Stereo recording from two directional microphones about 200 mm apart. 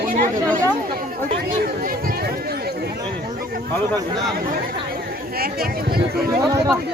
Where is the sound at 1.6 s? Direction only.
45° right (ahead or behind).